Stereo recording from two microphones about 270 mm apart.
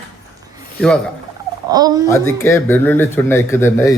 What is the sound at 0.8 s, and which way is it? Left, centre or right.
Speech, centre.